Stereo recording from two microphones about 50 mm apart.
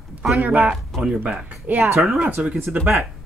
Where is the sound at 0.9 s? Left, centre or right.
Centre.